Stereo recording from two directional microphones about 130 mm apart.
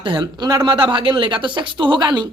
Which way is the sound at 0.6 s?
40° right (ahead or behind).